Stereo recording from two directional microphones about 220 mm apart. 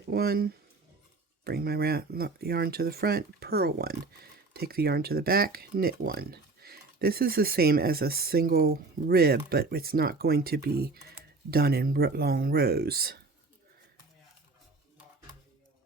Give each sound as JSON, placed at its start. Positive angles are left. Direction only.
{"t": 0.1, "sound": "speech", "side_deg": -45}